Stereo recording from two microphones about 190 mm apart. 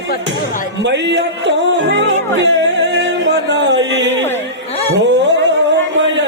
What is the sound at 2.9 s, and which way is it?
Music, 70° right (ahead or behind).